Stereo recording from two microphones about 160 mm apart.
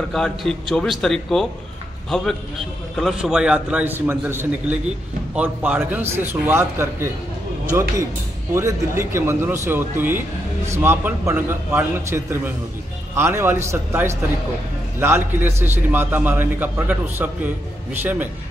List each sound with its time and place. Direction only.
0.1 s a man's voice: centre (ahead or behind); by 7.1 s 15° right (ahead or behind)
8.5 s a man's voice: 15° right (ahead or behind)